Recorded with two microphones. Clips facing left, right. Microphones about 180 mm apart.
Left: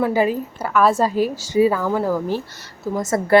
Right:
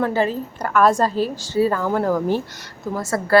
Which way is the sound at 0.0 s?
10° left (ahead or behind).